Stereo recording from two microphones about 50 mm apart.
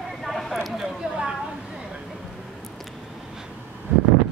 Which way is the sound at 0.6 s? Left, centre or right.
Centre.